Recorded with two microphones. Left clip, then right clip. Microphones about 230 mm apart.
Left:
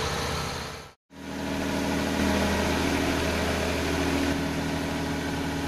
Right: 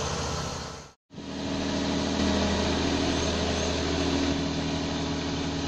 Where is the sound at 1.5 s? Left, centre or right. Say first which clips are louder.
Left 1 dB; centre.